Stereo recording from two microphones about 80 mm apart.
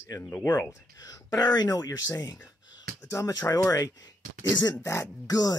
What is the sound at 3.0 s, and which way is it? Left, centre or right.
Speech, left.